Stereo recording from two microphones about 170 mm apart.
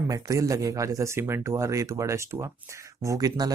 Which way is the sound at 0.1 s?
20° right (ahead or behind).